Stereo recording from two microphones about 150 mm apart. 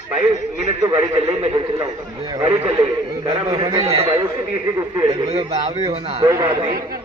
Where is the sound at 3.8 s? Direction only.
40° right (ahead or behind).